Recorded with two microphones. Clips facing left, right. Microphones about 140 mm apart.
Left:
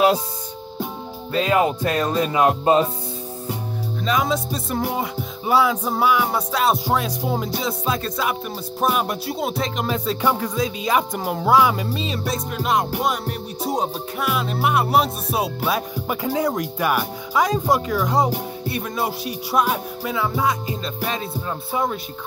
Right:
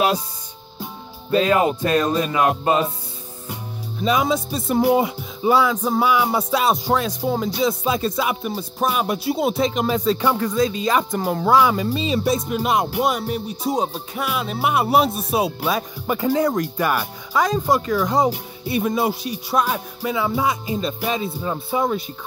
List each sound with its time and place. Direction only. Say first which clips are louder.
2.1 s music: left 1 dB; 25° left (ahead or behind)
4.0 s music: right 2 dB; 5° right (ahead or behind)
5.5 s music: right 1 dB; 5° left (ahead or behind)
7.6 s music: right 4 dB; 5° right (ahead or behind)
20.0 s music: right 5 dB; 5° right (ahead or behind)